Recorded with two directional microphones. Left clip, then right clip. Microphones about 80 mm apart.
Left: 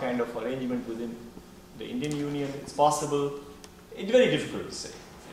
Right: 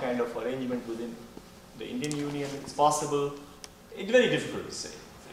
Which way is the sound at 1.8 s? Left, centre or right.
Centre.